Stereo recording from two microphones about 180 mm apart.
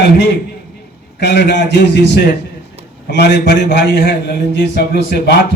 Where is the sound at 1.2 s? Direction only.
70° left (ahead or behind).